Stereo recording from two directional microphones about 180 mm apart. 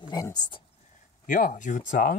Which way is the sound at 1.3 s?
50° left (ahead or behind).